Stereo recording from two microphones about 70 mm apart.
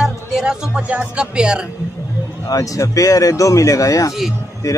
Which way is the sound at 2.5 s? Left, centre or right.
Left.